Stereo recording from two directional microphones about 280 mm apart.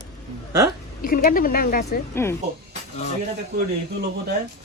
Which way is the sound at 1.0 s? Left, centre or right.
Left.